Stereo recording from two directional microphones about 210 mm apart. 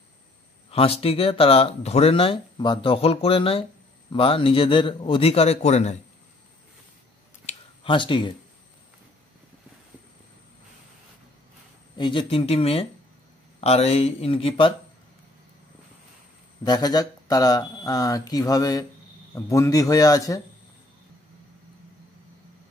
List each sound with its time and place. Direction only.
0.7 s speech: 25° left (ahead or behind)
7.4 s a sound: 25° left (ahead or behind)
12.0 s speech: 25° left (ahead or behind)
16.6 s speech: 20° left (ahead or behind)